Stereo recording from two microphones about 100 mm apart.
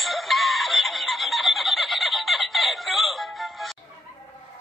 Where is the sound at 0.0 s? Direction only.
Centre (ahead or behind).